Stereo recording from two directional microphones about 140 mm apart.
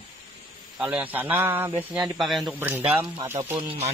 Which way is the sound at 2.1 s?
Centre (ahead or behind).